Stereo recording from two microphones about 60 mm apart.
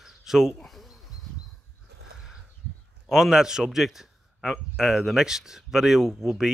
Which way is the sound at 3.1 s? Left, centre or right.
Centre.